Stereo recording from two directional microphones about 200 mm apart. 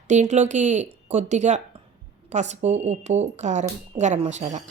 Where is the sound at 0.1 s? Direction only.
35° right (ahead or behind).